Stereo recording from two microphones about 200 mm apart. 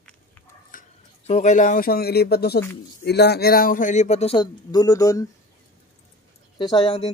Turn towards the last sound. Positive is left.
turn(degrees=25)  # may be behind; listen again after turning